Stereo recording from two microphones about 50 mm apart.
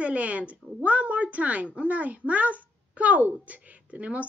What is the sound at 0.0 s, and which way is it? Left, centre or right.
A woman's voice, right.